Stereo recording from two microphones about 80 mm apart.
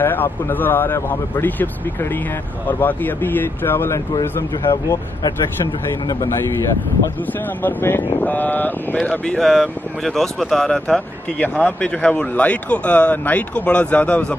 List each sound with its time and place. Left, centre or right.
0.0 s speech: left
4.2 s speech: left
7.6 s speech: left
9.4 s speech: centre
11.3 s speech: centre